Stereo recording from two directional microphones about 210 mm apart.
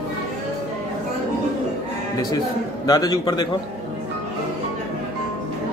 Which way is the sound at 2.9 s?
20° left (ahead or behind).